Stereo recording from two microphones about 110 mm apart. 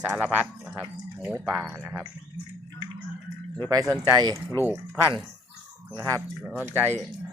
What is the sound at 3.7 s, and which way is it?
Speech, 35° right (ahead or behind).